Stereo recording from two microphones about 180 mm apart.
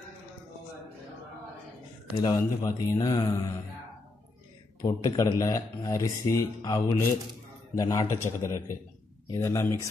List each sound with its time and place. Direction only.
2.1 s speech: 25° left (ahead or behind)
4.8 s a man's voice: 20° left (ahead or behind)